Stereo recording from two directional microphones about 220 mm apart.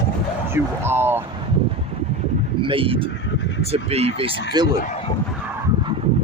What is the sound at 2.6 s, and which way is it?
Speech, 25° right (ahead or behind).